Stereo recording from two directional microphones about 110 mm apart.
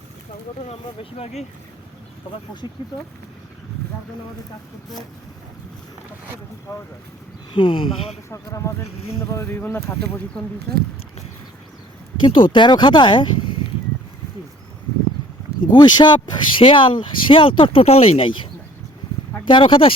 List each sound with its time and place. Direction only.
0.7 s speech: 65° left (ahead or behind)
6.7 s speech: 25° left (ahead or behind)
7.5 s speech: 50° left (ahead or behind)
8.3 s speech: 25° left (ahead or behind)
12.2 s speech: 50° left (ahead or behind)
15.7 s speech: 45° left (ahead or behind)
19.5 s speech: 50° left (ahead or behind)